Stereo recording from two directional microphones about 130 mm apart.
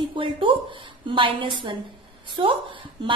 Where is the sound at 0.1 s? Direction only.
40° right (ahead or behind).